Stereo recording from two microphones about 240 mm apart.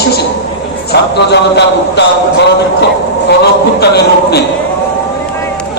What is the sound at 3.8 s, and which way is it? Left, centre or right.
Speech, left.